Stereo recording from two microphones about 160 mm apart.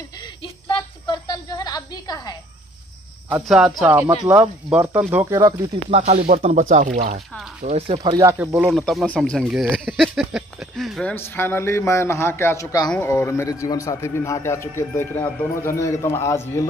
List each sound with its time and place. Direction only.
0.4 s a sound: 30° left (ahead or behind)
3.4 s speech: centre (ahead or behind)
5.2 s speech: 25° right (ahead or behind)
5.9 s speech: 40° right (ahead or behind)
8.0 s speech: 25° right (ahead or behind)
8.3 s speech: 15° right (ahead or behind)
8.6 s speech: centre (ahead or behind)
11.1 s a man's voice: 15° left (ahead or behind)